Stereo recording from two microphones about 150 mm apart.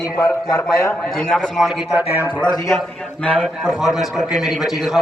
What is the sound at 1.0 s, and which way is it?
Speech, centre (ahead or behind).